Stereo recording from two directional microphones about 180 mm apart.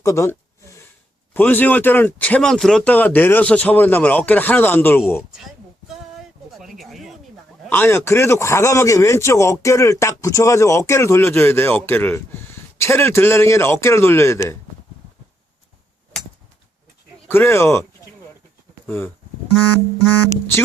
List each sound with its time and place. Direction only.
0.0 s a sound: 15° left (ahead or behind)
1.3 s a man's voice: 10° left (ahead or behind)
5.9 s a sound: centre (ahead or behind)
7.7 s a man's voice: 10° left (ahead or behind)
17.2 s a man's voice: 10° left (ahead or behind)
18.9 s a man's voice: 10° left (ahead or behind)